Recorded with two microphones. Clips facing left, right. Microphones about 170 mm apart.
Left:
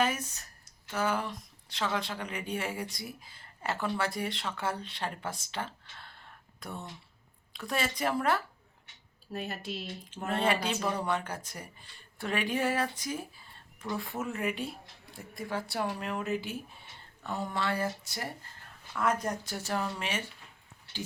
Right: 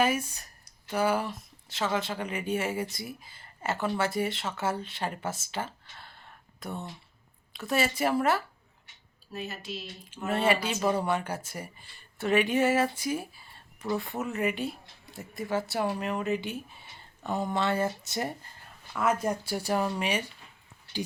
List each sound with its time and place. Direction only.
0.0 s speech: 10° right (ahead or behind)
9.3 s speech: 55° left (ahead or behind)
10.2 s speech: 5° right (ahead or behind)
17.2 s speech: 20° right (ahead or behind)
18.9 s speech: 10° right (ahead or behind)